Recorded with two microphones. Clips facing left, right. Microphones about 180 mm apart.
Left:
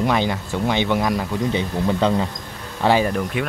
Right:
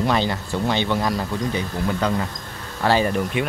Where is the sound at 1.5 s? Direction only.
25° left (ahead or behind).